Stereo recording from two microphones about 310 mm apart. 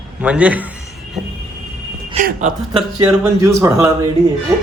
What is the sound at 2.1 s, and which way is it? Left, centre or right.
Speech, right.